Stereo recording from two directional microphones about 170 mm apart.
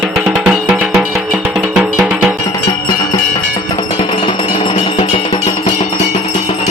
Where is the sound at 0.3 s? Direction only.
5° right (ahead or behind).